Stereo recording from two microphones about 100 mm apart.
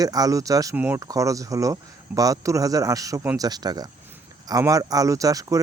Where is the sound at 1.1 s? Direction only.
35° right (ahead or behind).